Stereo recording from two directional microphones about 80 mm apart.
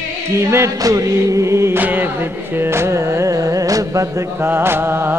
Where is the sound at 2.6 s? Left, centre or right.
Right.